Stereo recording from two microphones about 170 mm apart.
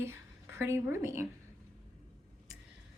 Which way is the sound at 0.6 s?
15° right (ahead or behind).